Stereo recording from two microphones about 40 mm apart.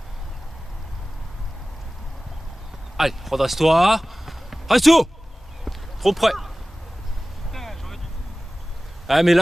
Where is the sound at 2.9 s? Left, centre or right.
Centre.